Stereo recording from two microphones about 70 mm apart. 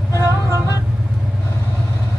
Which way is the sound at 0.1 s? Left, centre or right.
Left.